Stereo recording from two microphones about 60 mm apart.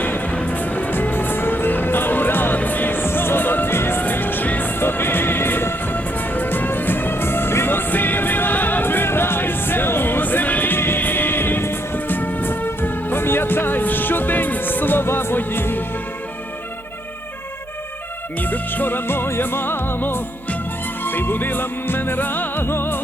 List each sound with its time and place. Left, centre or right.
0.0 s music: left
18.3 s music: left